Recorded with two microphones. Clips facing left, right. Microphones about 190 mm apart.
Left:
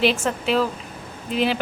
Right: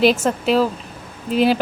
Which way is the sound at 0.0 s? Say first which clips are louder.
Right 5 dB; 40° right (ahead or behind).